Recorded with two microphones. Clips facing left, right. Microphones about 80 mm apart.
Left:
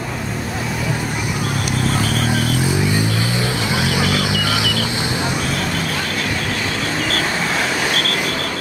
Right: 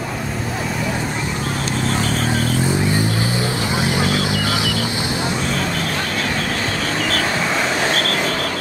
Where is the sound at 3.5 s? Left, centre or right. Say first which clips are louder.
Even; left.